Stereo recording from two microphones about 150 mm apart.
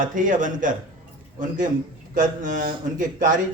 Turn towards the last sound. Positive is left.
turn(degrees=-60)  # may be behind; listen again after turning